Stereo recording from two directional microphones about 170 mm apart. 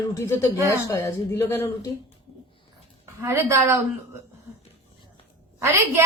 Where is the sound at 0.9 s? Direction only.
15° left (ahead or behind).